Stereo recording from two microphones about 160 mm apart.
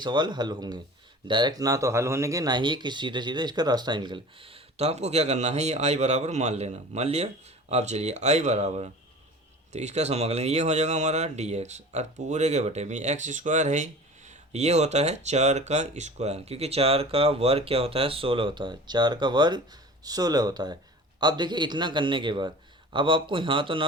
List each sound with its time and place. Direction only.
0.0 s a man's voice: 30° right (ahead or behind)